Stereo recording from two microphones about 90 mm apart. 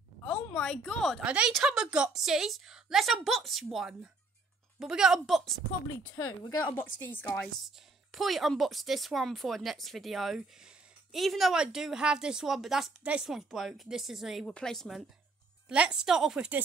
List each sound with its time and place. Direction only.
0.3 s a woman's voice: 10° left (ahead or behind)
1.2 s a woman's voice: 10° right (ahead or behind)
6.7 s speech: 20° left (ahead or behind)
7.6 s speech: centre (ahead or behind)
15.7 s a woman's voice: 10° right (ahead or behind)